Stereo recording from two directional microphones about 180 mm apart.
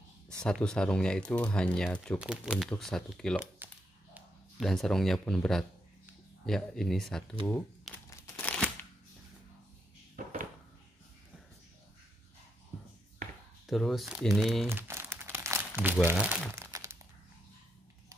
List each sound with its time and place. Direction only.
0.4 s speech: 5° left (ahead or behind)
2.1 s speech: 5° right (ahead or behind)
3.5 s a sound: 10° right (ahead or behind)
4.6 s speech: centre (ahead or behind)
8.1 s crumpling: 10° left (ahead or behind)
10.1 s a sound: 50° right (ahead or behind)
13.7 s speech: centre (ahead or behind)
14.7 s crumpling: 15° right (ahead or behind)